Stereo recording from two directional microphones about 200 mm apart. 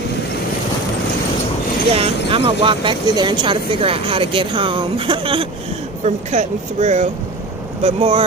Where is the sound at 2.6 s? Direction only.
25° right (ahead or behind).